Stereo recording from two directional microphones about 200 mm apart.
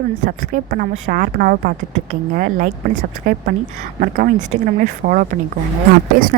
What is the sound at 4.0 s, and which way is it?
Speech, 45° right (ahead or behind).